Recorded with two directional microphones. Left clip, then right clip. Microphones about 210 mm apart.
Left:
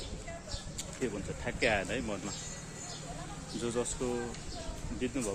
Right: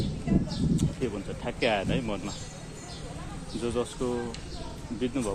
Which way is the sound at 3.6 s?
5° right (ahead or behind).